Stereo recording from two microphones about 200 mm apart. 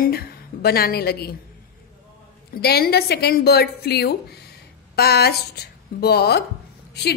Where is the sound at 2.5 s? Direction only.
50° left (ahead or behind).